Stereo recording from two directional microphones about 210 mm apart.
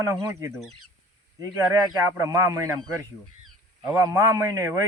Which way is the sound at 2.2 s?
15° right (ahead or behind).